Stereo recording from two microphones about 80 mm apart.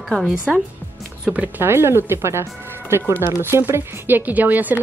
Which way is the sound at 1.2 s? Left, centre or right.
Centre.